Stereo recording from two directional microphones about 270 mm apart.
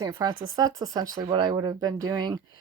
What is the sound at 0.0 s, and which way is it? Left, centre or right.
A woman's voice, centre.